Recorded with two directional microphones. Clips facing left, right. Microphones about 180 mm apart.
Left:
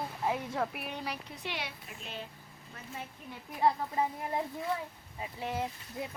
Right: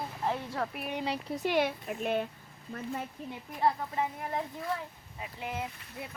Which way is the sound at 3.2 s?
35° right (ahead or behind).